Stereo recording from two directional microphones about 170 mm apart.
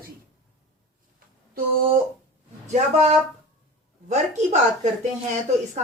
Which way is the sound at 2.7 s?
40° right (ahead or behind).